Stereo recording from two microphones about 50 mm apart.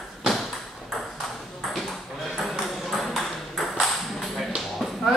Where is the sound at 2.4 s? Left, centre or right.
Centre.